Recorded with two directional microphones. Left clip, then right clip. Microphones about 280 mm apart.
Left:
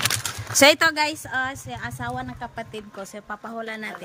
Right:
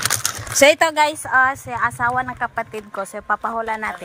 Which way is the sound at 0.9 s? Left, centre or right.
Right.